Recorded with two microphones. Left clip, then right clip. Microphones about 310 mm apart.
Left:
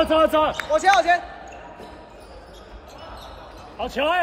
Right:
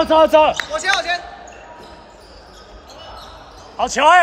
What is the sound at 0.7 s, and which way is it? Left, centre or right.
Speech, centre.